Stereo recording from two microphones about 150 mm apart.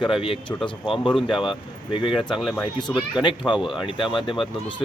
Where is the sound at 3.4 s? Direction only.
10° left (ahead or behind).